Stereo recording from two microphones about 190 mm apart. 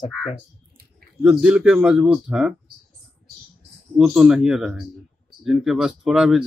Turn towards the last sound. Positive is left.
turn(degrees=-5)  # may be behind; listen again after turning